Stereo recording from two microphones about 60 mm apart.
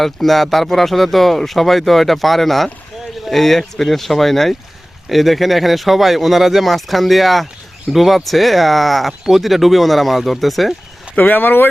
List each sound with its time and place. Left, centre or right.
0.0 s speech: centre
11.2 s speech: left